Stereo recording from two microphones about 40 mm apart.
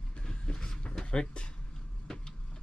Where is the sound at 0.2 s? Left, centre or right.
Left.